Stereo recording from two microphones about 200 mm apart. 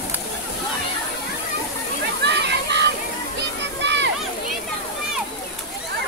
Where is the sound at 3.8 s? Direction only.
60° right (ahead or behind).